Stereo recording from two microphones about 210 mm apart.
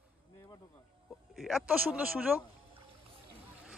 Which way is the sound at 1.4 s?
Centre (ahead or behind).